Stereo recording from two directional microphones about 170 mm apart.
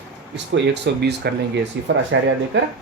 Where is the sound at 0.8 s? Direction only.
75° right (ahead or behind).